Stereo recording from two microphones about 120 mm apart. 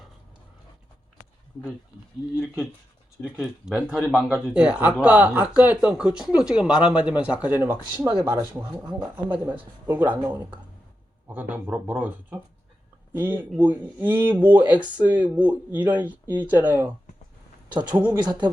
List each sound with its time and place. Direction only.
2.3 s speech: 5° right (ahead or behind)
7.9 s speech: 40° right (ahead or behind)
9.4 s speech: 15° right (ahead or behind)
18.1 s speech: 35° right (ahead or behind)